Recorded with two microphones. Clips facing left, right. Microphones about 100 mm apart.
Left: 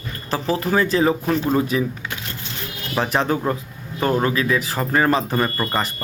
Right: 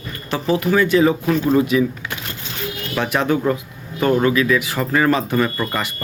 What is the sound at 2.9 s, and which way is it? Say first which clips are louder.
Speech: right 1 dB; 35° left (ahead or behind).